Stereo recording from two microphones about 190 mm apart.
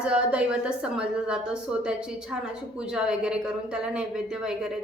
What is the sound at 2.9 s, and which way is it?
Speech, 5° right (ahead or behind).